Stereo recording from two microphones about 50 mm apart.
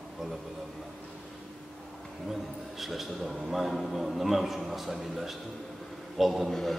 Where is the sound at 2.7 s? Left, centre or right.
Centre.